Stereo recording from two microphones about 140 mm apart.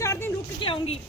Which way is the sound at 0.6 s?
40° left (ahead or behind).